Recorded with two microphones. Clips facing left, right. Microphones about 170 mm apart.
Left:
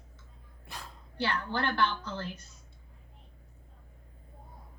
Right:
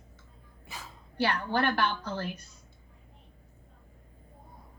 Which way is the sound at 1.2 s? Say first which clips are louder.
Right 4 dB; 65° right (ahead or behind).